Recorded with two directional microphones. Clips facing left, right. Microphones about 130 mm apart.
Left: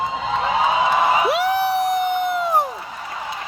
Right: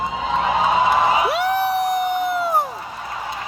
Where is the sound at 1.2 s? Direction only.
Centre (ahead or behind).